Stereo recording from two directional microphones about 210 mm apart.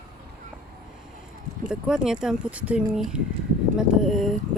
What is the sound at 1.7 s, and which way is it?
Speech, 5° right (ahead or behind).